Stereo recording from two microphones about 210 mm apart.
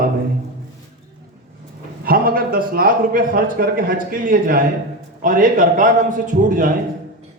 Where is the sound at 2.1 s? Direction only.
45° right (ahead or behind).